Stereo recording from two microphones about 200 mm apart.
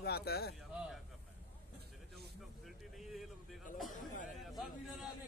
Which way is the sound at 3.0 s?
Centre (ahead or behind).